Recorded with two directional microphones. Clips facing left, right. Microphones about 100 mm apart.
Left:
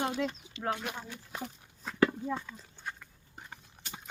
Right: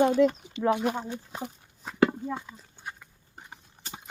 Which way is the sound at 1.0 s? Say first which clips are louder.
Right 5 dB; 30° right (ahead or behind).